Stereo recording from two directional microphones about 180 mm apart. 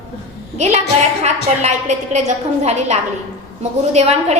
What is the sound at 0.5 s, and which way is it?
A woman's voice, 40° right (ahead or behind).